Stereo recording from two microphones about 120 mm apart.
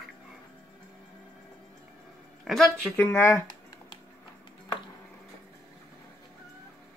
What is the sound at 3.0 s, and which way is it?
Speech, 20° left (ahead or behind).